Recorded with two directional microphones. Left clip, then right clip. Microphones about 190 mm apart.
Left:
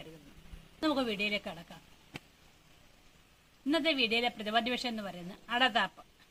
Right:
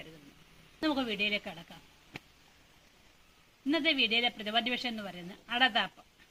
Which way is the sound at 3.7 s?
15° left (ahead or behind).